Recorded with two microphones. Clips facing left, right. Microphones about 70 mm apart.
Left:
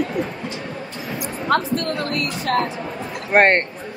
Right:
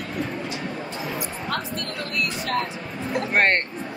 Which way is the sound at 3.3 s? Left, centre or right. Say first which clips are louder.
Left 6 dB; left.